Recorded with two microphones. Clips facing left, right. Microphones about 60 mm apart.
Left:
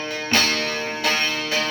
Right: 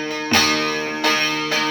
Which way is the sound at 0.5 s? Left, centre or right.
Right.